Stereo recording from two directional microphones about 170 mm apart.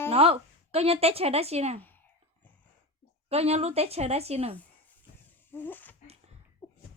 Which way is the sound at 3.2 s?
35° right (ahead or behind).